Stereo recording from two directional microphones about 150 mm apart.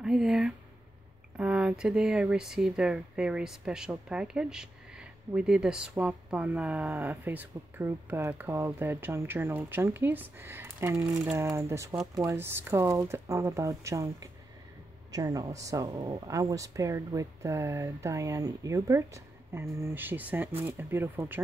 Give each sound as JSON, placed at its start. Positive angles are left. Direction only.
{"t": 0.0, "sound": "speech", "side_deg": -5}